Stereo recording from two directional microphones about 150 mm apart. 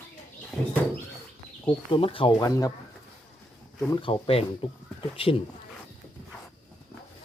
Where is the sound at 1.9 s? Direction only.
35° left (ahead or behind).